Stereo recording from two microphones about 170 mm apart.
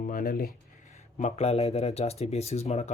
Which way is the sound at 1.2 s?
40° left (ahead or behind).